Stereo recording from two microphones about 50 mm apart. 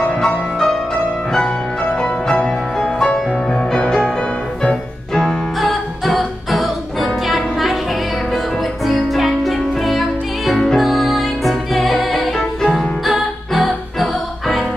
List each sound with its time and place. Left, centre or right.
0.2 s music: centre
5.6 s music: centre
8.8 s music: centre